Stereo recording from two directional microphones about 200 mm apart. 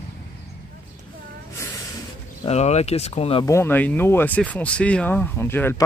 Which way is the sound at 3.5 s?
10° left (ahead or behind).